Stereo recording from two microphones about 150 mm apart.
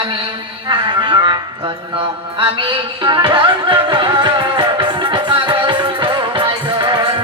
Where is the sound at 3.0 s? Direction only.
30° right (ahead or behind).